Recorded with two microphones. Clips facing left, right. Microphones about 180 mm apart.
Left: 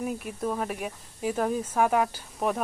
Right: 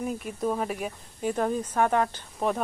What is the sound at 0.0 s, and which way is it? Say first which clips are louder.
Speech: right 1 dB; 5° left (ahead or behind).